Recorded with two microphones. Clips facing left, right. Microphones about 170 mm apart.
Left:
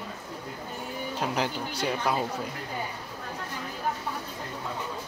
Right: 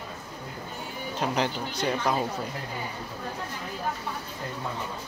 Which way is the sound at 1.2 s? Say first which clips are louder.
Right 2 dB; 5° left (ahead or behind).